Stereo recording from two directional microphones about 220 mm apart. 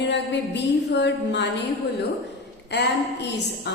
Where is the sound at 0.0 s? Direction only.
50° left (ahead or behind).